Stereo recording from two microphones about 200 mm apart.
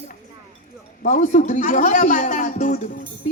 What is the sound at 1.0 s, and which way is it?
A woman's voice, 40° left (ahead or behind).